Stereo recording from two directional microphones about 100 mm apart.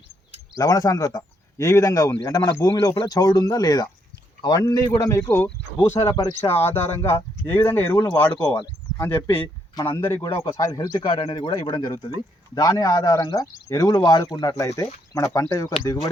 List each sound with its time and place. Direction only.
0.5 s a man's voice: 35° left (ahead or behind)
7.9 s a man's voice: 35° left (ahead or behind)
8.2 s speech: 15° left (ahead or behind)
10.0 s speech: 25° left (ahead or behind)
10.2 s a man's voice: 55° left (ahead or behind)
10.6 s a man's voice: 40° left (ahead or behind)
14.5 s a man's voice: 30° left (ahead or behind)